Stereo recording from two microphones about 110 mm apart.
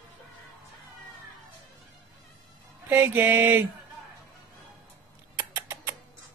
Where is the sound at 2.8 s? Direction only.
15° right (ahead or behind).